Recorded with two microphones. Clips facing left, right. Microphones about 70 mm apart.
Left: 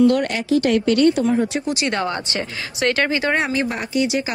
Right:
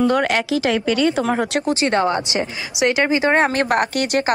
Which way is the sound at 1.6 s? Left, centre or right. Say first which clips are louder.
Right 4 dB; right.